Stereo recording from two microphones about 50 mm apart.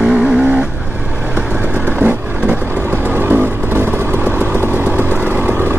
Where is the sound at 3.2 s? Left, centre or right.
Right.